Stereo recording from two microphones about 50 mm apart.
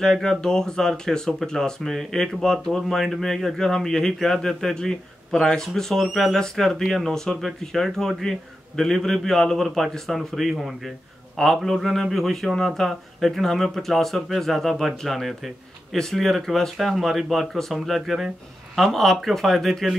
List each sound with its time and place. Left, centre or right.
0.0 s speech: centre